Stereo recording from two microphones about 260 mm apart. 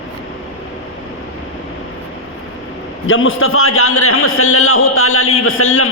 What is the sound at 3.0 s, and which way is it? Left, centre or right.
A man's voice, left.